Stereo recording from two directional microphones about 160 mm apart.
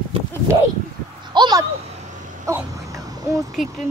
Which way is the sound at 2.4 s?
20° right (ahead or behind).